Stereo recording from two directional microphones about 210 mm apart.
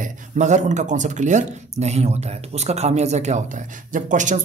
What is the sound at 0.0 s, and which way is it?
Speech, 35° right (ahead or behind).